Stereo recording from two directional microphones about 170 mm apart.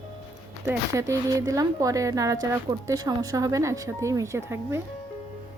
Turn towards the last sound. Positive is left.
turn(degrees=-15)  # may be behind; listen again after turning